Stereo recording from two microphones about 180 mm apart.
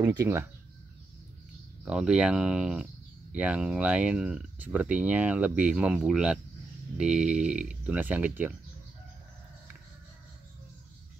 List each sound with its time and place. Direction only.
0.0 s speech: 15° right (ahead or behind)
1.9 s speech: 5° right (ahead or behind)